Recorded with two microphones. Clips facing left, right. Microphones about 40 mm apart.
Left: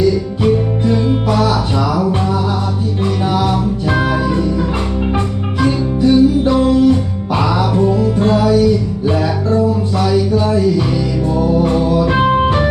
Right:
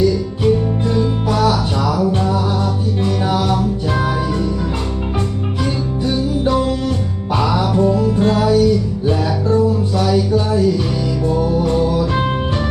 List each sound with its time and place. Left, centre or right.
5.6 s music: centre
8.2 s music: centre
10.1 s music: centre
11.9 s music: left